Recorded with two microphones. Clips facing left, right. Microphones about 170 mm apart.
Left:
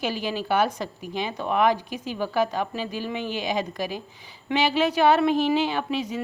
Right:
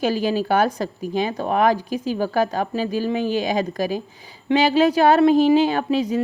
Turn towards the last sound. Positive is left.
turn(degrees=-40)  # may be behind; listen again after turning